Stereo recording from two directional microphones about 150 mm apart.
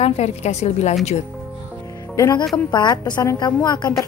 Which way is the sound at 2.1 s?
20° left (ahead or behind).